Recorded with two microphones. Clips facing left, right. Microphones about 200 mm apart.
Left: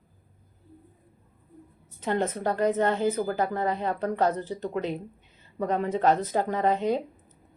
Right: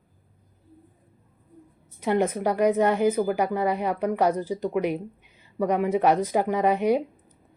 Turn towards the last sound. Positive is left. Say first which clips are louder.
# right 3 dB
turn(degrees=-15)  # may be behind; listen again after turning